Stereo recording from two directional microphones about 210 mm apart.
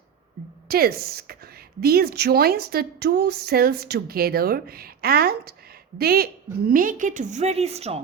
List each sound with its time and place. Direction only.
0.7 s a woman's voice: 45° right (ahead or behind); by 8.0 s 30° right (ahead or behind)